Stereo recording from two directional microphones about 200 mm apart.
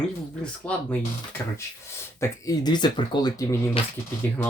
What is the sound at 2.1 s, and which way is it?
Speech, 15° left (ahead or behind).